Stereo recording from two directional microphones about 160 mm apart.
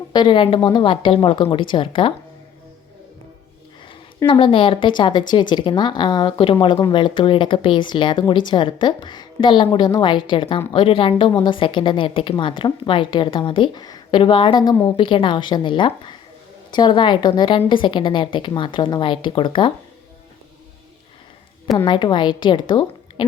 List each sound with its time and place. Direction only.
0.1 s a woman's voice: 30° left (ahead or behind)
4.3 s a woman's voice: 35° left (ahead or behind)
21.8 s speech: 30° left (ahead or behind)